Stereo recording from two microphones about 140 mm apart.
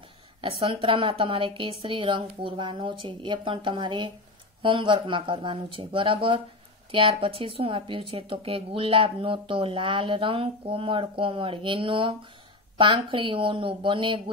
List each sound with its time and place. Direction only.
0.4 s speech: 40° right (ahead or behind)